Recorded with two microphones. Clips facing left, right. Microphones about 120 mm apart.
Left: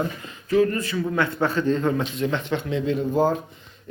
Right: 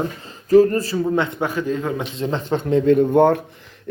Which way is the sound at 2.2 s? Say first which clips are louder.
Right 2 dB; 35° right (ahead or behind).